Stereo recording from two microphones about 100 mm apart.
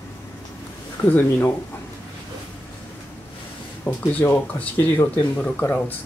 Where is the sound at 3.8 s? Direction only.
20° left (ahead or behind).